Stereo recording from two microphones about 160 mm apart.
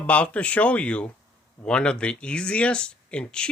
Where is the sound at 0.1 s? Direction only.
10° left (ahead or behind).